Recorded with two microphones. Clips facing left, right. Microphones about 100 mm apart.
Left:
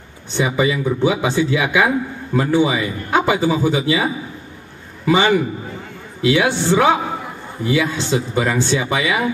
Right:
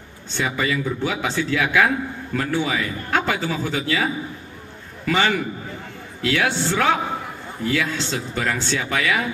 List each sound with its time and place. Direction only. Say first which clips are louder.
0.3 s a man's voice: left 5 dB; 15° left (ahead or behind)